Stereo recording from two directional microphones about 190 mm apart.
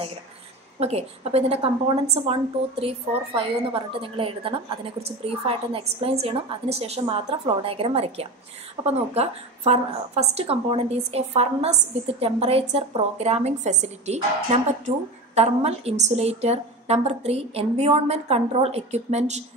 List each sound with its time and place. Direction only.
0.7 s a woman's voice: 35° right (ahead or behind)